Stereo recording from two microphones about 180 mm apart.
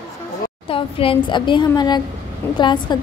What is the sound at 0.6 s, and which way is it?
A woman's voice, 30° left (ahead or behind).